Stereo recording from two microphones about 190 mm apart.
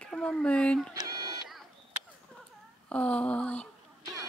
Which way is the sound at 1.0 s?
20° right (ahead or behind).